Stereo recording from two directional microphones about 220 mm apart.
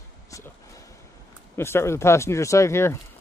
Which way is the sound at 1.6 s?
10° left (ahead or behind).